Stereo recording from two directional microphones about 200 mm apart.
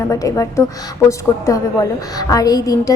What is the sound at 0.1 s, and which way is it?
A woman's voice, 15° left (ahead or behind).